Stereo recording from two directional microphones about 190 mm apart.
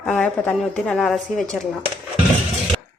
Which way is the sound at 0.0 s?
5° left (ahead or behind).